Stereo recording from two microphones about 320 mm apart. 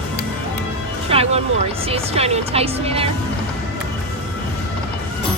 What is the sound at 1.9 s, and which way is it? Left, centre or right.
Speech, centre.